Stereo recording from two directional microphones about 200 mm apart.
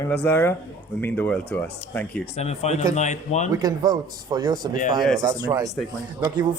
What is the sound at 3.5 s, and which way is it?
Speech, 20° right (ahead or behind).